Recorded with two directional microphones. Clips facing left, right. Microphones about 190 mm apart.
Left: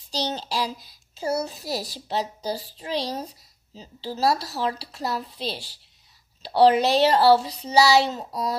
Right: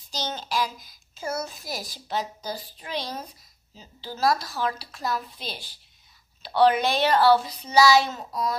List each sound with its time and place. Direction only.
0.1 s speech: 35° left (ahead or behind)